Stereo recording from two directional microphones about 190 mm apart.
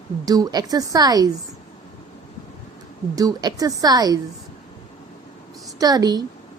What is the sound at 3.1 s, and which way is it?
A woman's voice, 20° right (ahead or behind).